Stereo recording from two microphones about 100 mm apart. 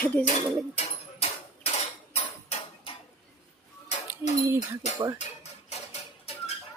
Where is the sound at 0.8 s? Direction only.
90° left.